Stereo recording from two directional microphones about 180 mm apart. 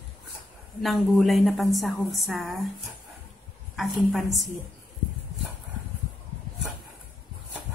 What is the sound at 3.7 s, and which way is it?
Speech, centre (ahead or behind).